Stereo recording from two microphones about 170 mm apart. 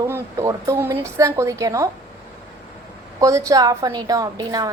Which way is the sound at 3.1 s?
20° right (ahead or behind).